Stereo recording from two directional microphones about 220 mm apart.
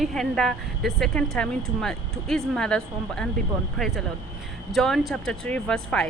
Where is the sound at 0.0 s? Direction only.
Centre (ahead or behind).